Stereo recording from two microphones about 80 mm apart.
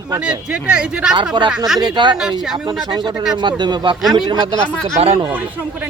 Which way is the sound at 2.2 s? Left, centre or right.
Centre.